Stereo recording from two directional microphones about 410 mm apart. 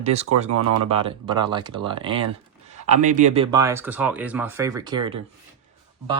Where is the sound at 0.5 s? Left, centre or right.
Right.